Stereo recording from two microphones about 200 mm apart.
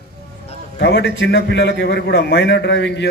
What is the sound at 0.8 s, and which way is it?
A man's voice, 55° left (ahead or behind).